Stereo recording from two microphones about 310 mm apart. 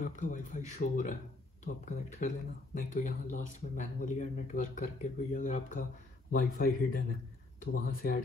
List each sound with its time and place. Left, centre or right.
0.0 s speech: left